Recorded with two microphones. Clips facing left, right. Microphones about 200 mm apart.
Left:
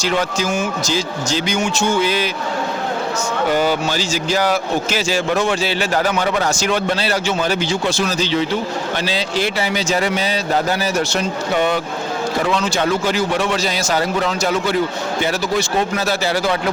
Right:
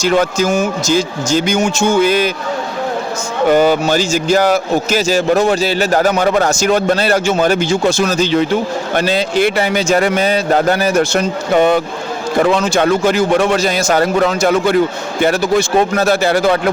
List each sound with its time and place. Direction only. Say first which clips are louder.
0.0 s speech: right 6 dB; 45° right (ahead or behind)
3.5 s speech: right 8 dB; 50° right (ahead or behind)